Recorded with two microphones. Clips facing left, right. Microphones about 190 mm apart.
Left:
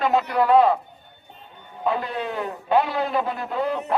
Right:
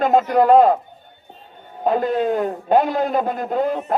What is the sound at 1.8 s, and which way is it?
A man's voice, 45° right (ahead or behind).